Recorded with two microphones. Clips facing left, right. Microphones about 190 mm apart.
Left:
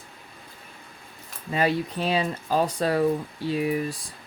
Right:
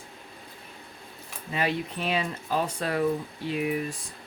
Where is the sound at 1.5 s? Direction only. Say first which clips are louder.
Left 4 dB; 35° left (ahead or behind).